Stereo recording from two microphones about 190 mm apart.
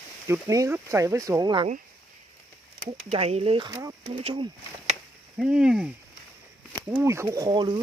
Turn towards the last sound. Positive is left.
turn(degrees=-25)  # may be behind; listen again after turning